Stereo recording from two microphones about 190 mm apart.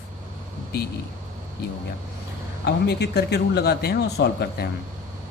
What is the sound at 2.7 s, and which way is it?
A man's voice, 60° left (ahead or behind).